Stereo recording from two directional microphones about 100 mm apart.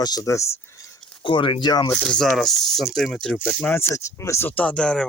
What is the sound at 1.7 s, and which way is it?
Speech, 40° left (ahead or behind).